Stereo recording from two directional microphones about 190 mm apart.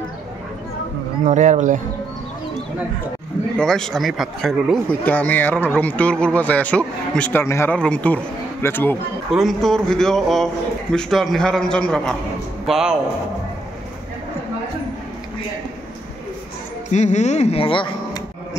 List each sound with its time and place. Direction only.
1.2 s speech: 40° right (ahead or behind)
3.5 s speech: 5° left (ahead or behind)
9.3 s a man's voice: centre (ahead or behind)
16.9 s speech: 40° left (ahead or behind); by 18.6 s 25° left (ahead or behind)